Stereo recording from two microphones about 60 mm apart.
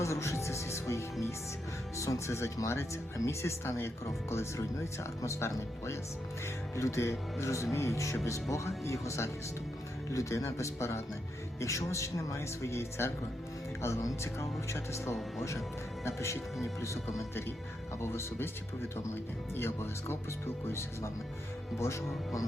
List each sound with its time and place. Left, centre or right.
0.0 s music: left
2.6 s speech: left
18.0 s speech: left
19.5 s speech: left